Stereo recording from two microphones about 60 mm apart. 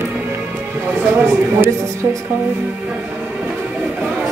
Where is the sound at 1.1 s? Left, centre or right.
Right.